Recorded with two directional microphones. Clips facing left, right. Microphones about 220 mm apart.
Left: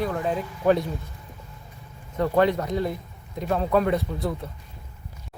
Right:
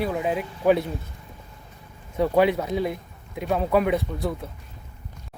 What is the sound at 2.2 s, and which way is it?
Speech, 10° right (ahead or behind).